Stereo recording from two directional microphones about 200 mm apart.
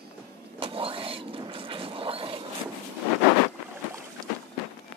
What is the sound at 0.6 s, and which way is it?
Vehicle, 25° right (ahead or behind).